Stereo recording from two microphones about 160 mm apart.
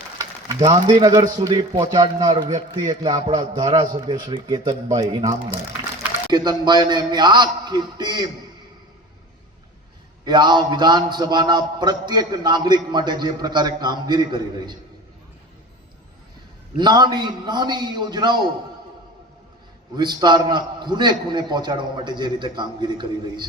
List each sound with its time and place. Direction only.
0.2 s a man's voice: 25° right (ahead or behind)
10.2 s a man's voice: 25° right (ahead or behind)
16.7 s a man's voice: 25° right (ahead or behind)
20.0 s a man's voice: 25° right (ahead or behind)